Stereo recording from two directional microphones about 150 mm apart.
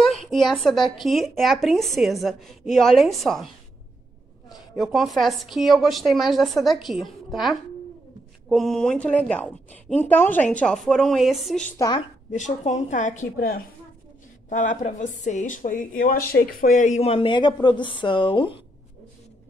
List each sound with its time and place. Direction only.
0.0 s a sound: centre (ahead or behind)
1.0 s a woman's voice: centre (ahead or behind)
4.5 s a woman's voice: centre (ahead or behind)
12.3 s a woman's voice: 50° left (ahead or behind); by 18.6 s 35° left (ahead or behind)